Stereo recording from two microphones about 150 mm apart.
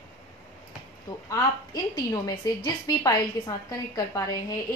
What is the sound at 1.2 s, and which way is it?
A woman's voice, 25° left (ahead or behind).